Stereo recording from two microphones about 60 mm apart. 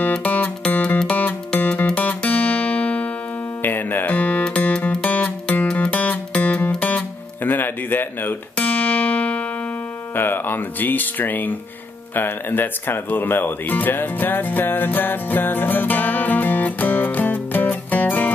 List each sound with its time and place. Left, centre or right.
0.1 s music: left
0.8 s music: centre
1.1 s music: left
3.6 s music: left
7.4 s a sound: left
8.5 s music: left
10.1 s speech: left